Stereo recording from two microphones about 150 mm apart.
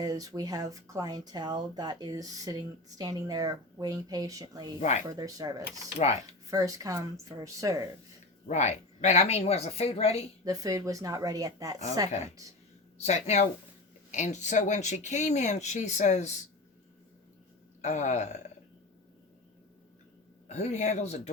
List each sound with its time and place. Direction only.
0.0 s speech: 25° right (ahead or behind)
4.8 s speech: 50° left (ahead or behind)
5.0 s speech: 25° right (ahead or behind)
8.4 s speech: 50° left (ahead or behind)
10.4 s speech: 25° right (ahead or behind)
13.0 s speech: 50° left (ahead or behind)
17.8 s speech: 50° left (ahead or behind)
20.5 s speech: 50° left (ahead or behind)